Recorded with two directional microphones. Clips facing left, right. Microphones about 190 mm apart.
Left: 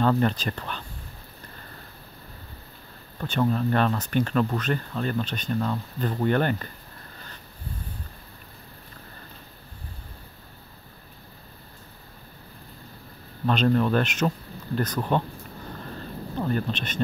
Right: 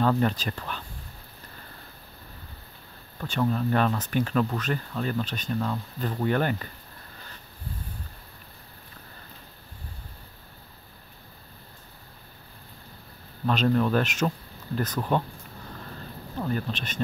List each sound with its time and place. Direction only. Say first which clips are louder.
0.0 s speech: left 1 dB; 5° right (ahead or behind)
3.2 s speech: left 2 dB; centre (ahead or behind)
13.5 s speech: left 1 dB; centre (ahead or behind)
16.3 s speech: left 2 dB; 5° right (ahead or behind)